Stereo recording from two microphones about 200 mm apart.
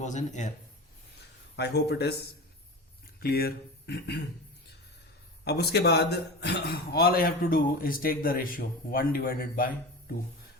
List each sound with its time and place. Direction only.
0.0 s speech: 35° left (ahead or behind)
1.5 s speech: 55° left (ahead or behind)
5.5 s speech: 55° left (ahead or behind)